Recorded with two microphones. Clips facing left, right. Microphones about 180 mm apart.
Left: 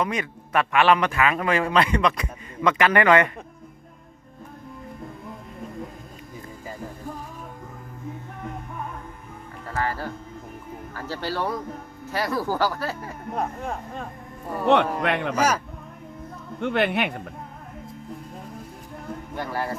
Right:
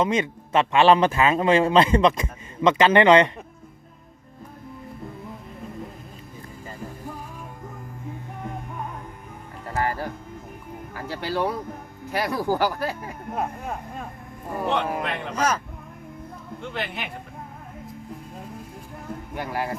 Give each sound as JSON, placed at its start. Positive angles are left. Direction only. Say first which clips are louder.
{"t": 0.0, "sound": "a man's voice", "louder": "right 4 dB", "side_deg": -25}
{"t": 9.6, "sound": "music", "louder": "right 2 dB", "side_deg": -15}
{"t": 10.9, "sound": "speech", "louder": "right 2 dB", "side_deg": -15}
{"t": 14.7, "sound": "a man's voice", "louder": "left 7 dB", "side_deg": 70}
{"t": 15.4, "sound": "speech", "louder": "right 1 dB", "side_deg": 10}
{"t": 16.6, "sound": "a man's voice", "louder": "left 10 dB", "side_deg": 65}
{"t": 19.3, "sound": "speech", "louder": "even", "side_deg": -15}